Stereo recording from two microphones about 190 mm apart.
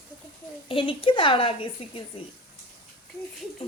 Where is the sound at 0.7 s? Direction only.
25° left (ahead or behind).